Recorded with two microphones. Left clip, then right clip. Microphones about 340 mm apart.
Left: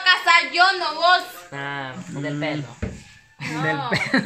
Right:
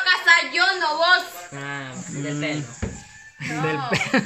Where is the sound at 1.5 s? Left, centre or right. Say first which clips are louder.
Left 5 dB; centre.